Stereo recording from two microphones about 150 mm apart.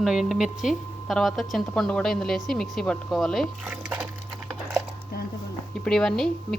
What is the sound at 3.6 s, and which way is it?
Speech, 10° right (ahead or behind).